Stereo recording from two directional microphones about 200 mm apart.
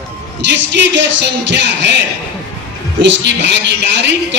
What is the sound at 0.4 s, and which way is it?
A woman's voice, 60° right (ahead or behind).